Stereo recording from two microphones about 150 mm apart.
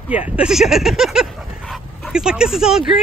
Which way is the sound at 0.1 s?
10° right (ahead or behind).